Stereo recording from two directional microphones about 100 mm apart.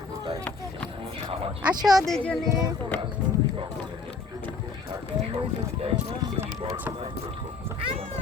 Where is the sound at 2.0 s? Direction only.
5° left (ahead or behind).